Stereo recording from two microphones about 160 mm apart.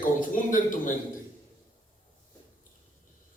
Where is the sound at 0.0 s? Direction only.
55° left (ahead or behind).